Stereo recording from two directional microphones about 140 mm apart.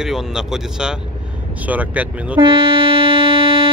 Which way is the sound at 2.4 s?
40° right (ahead or behind).